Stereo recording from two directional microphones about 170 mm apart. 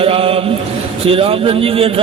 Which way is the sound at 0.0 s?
35° right (ahead or behind).